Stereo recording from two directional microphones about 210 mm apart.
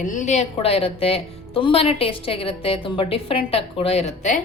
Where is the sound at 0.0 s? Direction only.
35° left (ahead or behind).